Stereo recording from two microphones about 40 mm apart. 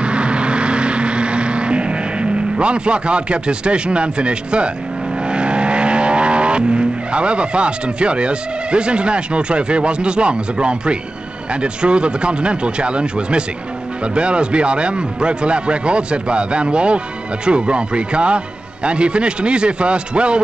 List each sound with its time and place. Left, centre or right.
0.0 s vehicle: right
11.6 s speech: right